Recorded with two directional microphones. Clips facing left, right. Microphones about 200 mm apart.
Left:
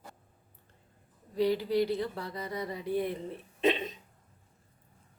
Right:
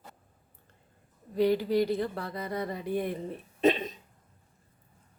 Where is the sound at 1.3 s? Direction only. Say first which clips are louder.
Right 2 dB; 55° right (ahead or behind).